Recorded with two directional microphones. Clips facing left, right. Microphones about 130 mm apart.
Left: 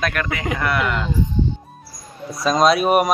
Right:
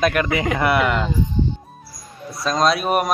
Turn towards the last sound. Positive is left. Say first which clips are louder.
# left 3 dB
turn(degrees=0)  # may be behind; listen again after turning